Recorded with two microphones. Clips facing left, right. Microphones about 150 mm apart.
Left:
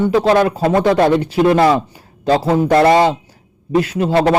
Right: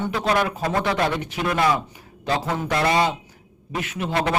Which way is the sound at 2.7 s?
50° left (ahead or behind).